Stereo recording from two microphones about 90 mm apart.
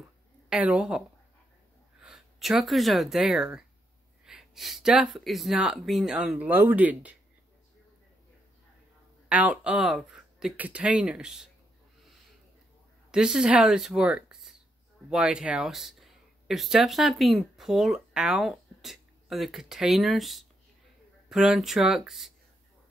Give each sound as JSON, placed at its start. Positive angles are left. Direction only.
{"t": 0.5, "sound": "speech", "side_deg": -15}
{"t": 6.3, "sound": "speech", "side_deg": -20}
{"t": 9.3, "sound": "speech", "side_deg": -15}
{"t": 10.5, "sound": "speech", "side_deg": -15}
{"t": 13.1, "sound": "speech", "side_deg": -5}